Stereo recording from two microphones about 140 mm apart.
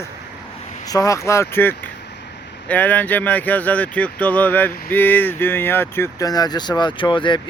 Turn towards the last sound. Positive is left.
turn(degrees=35)  # may be behind; listen again after turning